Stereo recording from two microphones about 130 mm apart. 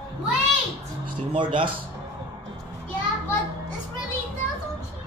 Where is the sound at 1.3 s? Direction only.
40° right (ahead or behind).